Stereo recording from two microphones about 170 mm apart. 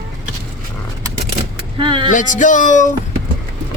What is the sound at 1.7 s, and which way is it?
Speech, 30° right (ahead or behind).